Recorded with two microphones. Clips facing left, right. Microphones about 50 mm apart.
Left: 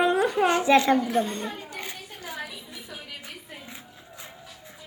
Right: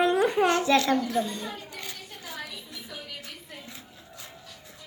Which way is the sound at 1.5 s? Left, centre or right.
Left.